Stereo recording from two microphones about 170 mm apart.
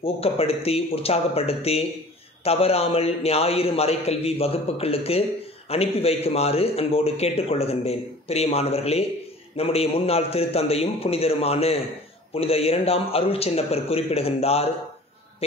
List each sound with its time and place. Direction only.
0.0 s a man's voice: 35° left (ahead or behind)